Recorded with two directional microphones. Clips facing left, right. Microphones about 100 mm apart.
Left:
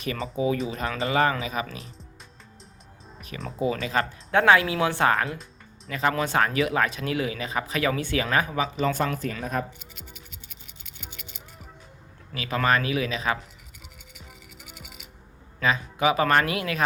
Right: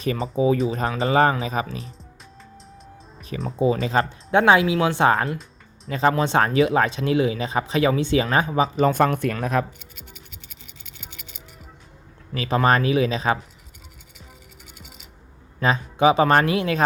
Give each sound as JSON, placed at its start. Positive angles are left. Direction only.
{"t": 0.0, "sound": "speech", "side_deg": -35}
{"t": 3.2, "sound": "music", "side_deg": 0}
{"t": 3.6, "sound": "speech", "side_deg": -30}
{"t": 4.3, "sound": "speech", "side_deg": -20}
{"t": 5.1, "sound": "speech", "side_deg": -30}
{"t": 8.9, "sound": "speech", "side_deg": -50}
{"t": 12.3, "sound": "speech", "side_deg": -35}
{"t": 15.6, "sound": "speech", "side_deg": -35}